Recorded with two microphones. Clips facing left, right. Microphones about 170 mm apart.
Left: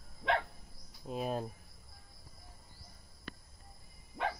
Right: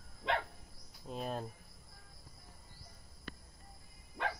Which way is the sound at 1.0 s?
5° left (ahead or behind).